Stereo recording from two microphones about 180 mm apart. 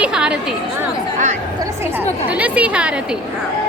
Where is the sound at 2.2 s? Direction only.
10° right (ahead or behind).